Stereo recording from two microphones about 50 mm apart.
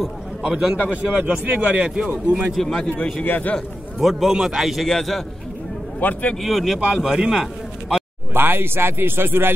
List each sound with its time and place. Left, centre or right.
0.4 s a man's voice: centre; by 1.6 s right
1.7 s a man's voice: centre
2.0 s speech: right
2.5 s a man's voice: centre
2.8 s a man's voice: centre
3.3 s a man's voice: left
4.0 s a man's voice: centre
4.8 s a man's voice: centre
5.9 s a man's voice: left
6.3 s a man's voice: centre
6.8 s a man's voice: centre
8.3 s speech: right